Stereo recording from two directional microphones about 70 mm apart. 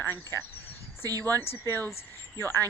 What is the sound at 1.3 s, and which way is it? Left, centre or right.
Speech, left.